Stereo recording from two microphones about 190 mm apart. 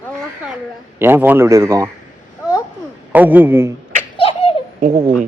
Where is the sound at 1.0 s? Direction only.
10° right (ahead or behind).